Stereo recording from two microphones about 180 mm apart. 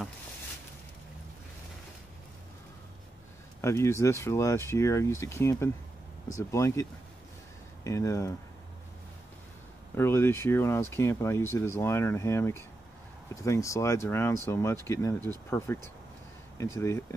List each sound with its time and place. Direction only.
3.6 s speech: 15° left (ahead or behind)
9.9 s speech: 15° left (ahead or behind)